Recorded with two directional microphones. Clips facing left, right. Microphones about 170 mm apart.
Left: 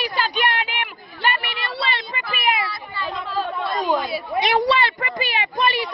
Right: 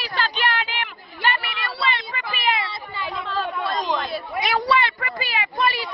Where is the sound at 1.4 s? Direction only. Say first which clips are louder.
Even; 25° left (ahead or behind).